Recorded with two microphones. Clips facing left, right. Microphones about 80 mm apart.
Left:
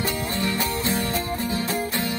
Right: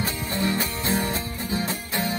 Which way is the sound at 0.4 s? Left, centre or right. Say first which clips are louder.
Right 1 dB; right.